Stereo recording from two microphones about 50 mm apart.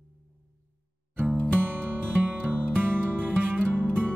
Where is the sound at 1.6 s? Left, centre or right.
Right.